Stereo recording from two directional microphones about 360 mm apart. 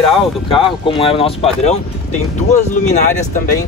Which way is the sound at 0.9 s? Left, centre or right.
Centre.